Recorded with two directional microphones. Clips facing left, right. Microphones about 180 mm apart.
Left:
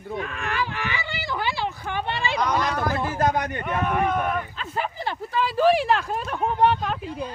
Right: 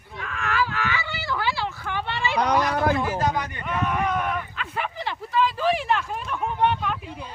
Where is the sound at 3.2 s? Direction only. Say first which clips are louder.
Left 2 dB; 50° left (ahead or behind); by 7.2 s 35° left (ahead or behind).